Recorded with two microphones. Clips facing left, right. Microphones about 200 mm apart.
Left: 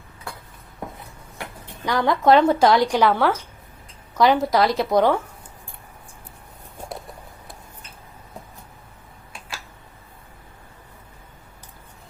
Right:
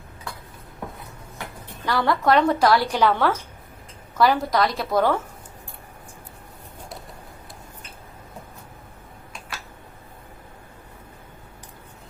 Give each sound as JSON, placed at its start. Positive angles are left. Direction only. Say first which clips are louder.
{"t": 1.8, "sound": "a woman's voice", "louder": "left 2 dB", "side_deg": 15}
{"t": 4.2, "sound": "a woman's voice", "louder": "left 2 dB", "side_deg": 20}